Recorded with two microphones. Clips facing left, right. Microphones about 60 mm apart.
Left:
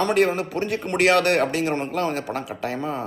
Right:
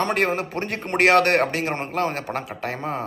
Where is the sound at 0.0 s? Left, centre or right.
Right.